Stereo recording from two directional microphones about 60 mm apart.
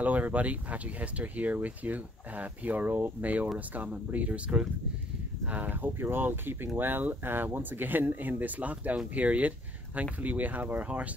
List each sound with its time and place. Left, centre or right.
0.0 s speech: right